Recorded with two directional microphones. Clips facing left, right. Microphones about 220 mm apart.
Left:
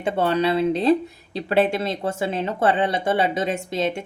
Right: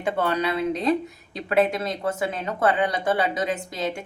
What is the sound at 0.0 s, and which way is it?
A woman's voice, 25° left (ahead or behind).